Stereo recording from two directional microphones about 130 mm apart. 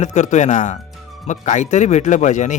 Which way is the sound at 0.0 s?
65° left (ahead or behind).